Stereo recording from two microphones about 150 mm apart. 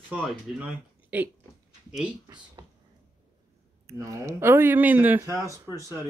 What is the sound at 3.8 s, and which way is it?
Speech, 20° right (ahead or behind).